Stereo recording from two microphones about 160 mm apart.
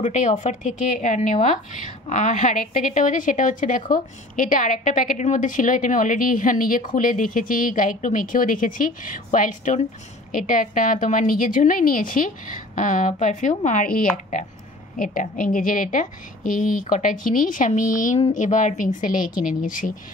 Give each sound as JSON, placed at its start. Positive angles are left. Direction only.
{"t": 0.0, "sound": "a woman's voice", "side_deg": 50}